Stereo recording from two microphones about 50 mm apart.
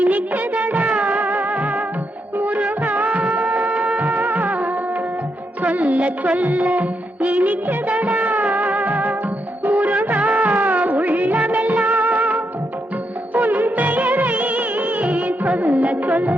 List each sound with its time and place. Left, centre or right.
0.0 s music of bollywood: right
5.6 s music: right
9.6 s music of bollywood: right